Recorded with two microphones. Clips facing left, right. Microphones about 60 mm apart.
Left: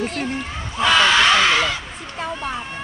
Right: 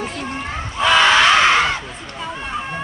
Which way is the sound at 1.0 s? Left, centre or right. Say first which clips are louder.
Right 4 dB; right.